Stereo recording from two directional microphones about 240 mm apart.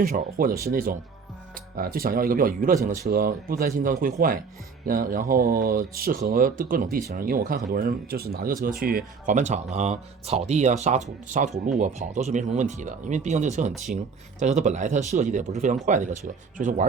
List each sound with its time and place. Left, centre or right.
0.0 s speech: right